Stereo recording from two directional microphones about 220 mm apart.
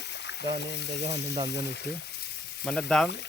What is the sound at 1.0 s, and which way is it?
Speech, 30° right (ahead or behind).